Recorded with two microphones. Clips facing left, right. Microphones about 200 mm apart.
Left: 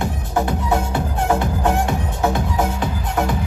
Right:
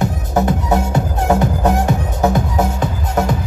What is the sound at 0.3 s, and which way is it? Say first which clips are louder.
Music: right 3 dB; 40° right (ahead or behind).